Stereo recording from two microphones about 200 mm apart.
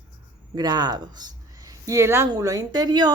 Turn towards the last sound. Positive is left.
turn(degrees=-20)  # may be behind; listen again after turning